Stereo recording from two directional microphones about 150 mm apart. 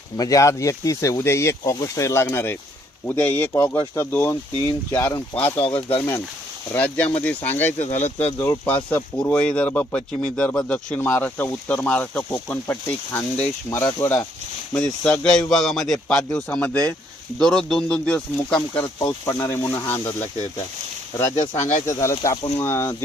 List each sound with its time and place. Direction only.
0.2 s speech: 20° left (ahead or behind)
5.5 s speech: 40° left (ahead or behind)
6.0 s speech: 15° left (ahead or behind)
14.8 s a man's voice: 5° left (ahead or behind)
18.9 s speech: 20° left (ahead or behind)
21.5 s speech: 50° left (ahead or behind)
22.1 s speech: 25° left (ahead or behind)